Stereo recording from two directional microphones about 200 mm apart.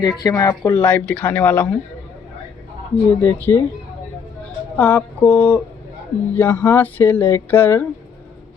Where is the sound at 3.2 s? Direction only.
10° left (ahead or behind).